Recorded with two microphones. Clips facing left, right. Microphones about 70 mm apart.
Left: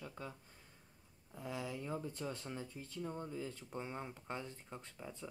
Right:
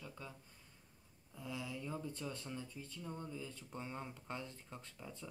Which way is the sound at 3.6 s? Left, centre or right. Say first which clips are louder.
Left 2 dB; left.